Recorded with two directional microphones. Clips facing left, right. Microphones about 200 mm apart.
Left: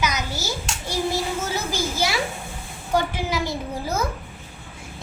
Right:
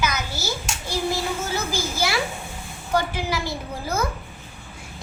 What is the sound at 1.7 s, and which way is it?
Speech, 20° left (ahead or behind).